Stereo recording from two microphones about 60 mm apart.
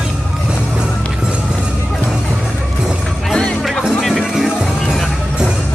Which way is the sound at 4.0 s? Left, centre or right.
Centre.